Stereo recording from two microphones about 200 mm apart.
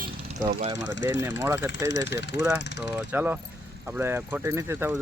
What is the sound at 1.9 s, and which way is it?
Speech, 60° left (ahead or behind).